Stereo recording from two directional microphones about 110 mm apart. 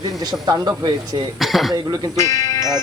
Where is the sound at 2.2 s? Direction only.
30° left (ahead or behind).